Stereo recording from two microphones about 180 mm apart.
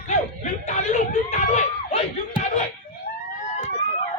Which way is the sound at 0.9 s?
40° left (ahead or behind).